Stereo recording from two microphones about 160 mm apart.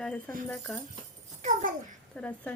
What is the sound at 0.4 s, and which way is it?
Speech, 10° left (ahead or behind).